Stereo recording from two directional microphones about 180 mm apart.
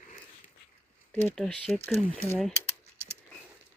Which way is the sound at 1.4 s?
5° left (ahead or behind).